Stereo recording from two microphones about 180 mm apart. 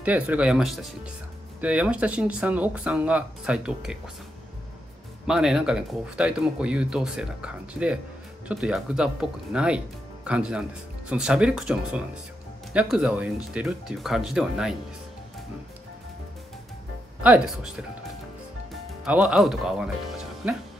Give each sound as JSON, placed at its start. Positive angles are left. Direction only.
{"t": 0.0, "sound": "speech", "side_deg": -10}
{"t": 5.2, "sound": "speech", "side_deg": -5}
{"t": 17.2, "sound": "speech", "side_deg": -5}
{"t": 19.0, "sound": "speech", "side_deg": -5}